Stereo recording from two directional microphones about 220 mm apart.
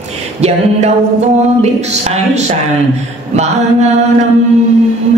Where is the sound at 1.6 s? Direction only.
30° right (ahead or behind).